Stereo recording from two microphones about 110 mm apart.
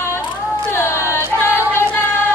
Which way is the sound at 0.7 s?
25° left (ahead or behind).